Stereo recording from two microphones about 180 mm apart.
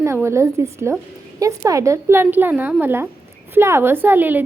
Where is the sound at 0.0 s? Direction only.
15° right (ahead or behind).